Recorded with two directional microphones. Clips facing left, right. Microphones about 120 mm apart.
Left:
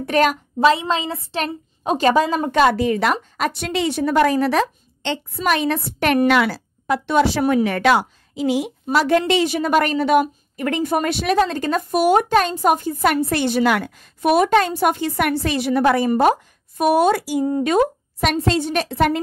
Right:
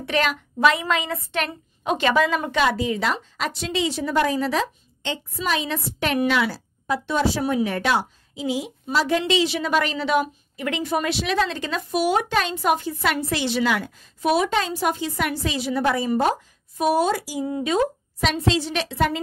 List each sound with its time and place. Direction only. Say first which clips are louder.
0.0 s a woman's voice: left 6 dB; 45° left (ahead or behind)
0.6 s a woman's voice: left 3 dB; 30° left (ahead or behind)
2.6 s a woman's voice: left 6 dB; 55° left (ahead or behind)
9.2 s a woman's voice: left 3 dB; 50° left (ahead or behind)
17.5 s a woman's voice: left 4 dB; 50° left (ahead or behind)